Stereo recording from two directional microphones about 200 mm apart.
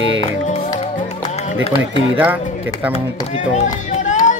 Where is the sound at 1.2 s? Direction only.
35° left (ahead or behind).